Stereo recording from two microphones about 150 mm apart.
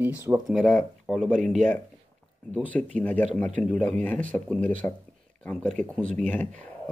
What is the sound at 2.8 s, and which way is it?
Speech, 5° left (ahead or behind).